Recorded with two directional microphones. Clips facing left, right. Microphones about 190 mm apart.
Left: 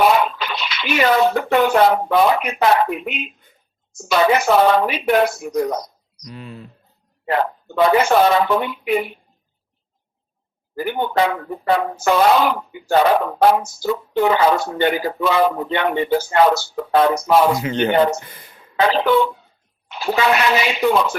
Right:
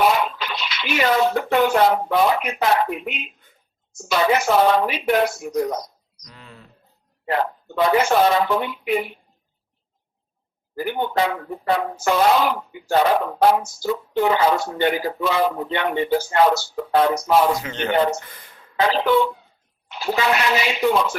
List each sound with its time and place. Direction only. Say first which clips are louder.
0.0 s speech: left 3 dB; 65° left (ahead or behind)
6.2 s speech: left 10 dB; 15° left (ahead or behind)
7.3 s speech: left 3 dB; 70° left (ahead or behind)
10.8 s speech: left 3 dB; 65° left (ahead or behind)
17.6 s speech: left 6 dB; 20° left (ahead or behind)
18.8 s speech: left 2 dB; 70° left (ahead or behind)